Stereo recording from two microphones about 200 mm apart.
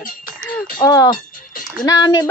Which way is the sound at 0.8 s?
15° left (ahead or behind).